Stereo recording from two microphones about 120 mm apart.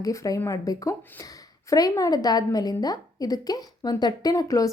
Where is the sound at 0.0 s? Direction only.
30° left (ahead or behind).